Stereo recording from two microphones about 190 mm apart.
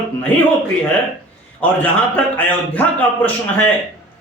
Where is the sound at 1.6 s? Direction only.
10° left (ahead or behind).